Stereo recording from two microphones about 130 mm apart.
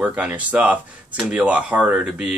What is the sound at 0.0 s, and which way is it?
Speech, 10° right (ahead or behind).